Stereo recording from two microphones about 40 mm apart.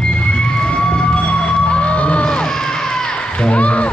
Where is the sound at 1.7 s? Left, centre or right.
Left.